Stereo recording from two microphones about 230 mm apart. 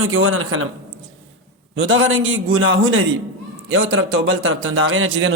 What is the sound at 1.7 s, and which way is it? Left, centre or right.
Speech, right.